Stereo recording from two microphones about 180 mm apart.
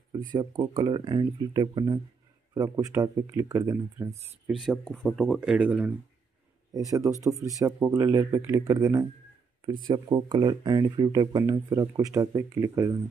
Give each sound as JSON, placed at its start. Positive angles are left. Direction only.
{"t": 0.3, "sound": "speech", "side_deg": -25}
{"t": 4.5, "sound": "speech", "side_deg": 0}
{"t": 6.7, "sound": "speech", "side_deg": -20}